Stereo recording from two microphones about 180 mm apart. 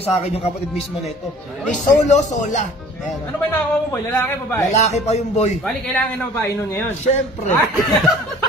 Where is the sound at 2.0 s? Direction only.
40° left (ahead or behind).